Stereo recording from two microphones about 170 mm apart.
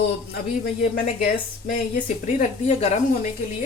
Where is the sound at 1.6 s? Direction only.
55° left (ahead or behind).